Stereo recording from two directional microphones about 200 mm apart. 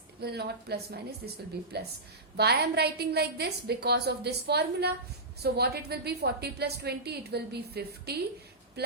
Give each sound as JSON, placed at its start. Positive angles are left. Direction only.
{"t": 0.2, "sound": "a woman's voice", "side_deg": -55}